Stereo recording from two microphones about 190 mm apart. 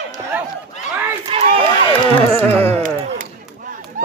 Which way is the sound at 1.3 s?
30° right (ahead or behind).